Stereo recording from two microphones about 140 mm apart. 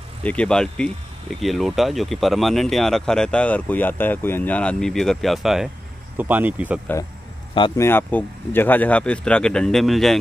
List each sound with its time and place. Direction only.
0.2 s speech: 10° left (ahead or behind)
6.1 s speech: 10° right (ahead or behind)
7.7 s speech: 15° left (ahead or behind); by 10.1 s centre (ahead or behind)